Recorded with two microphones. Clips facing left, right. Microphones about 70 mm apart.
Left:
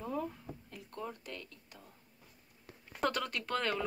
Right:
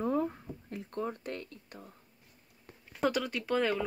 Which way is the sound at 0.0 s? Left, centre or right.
Right.